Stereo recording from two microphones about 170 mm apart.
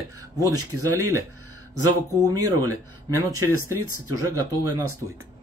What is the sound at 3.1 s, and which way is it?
Speech, 15° right (ahead or behind).